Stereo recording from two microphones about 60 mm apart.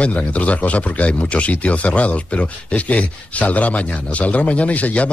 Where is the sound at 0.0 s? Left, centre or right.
Left.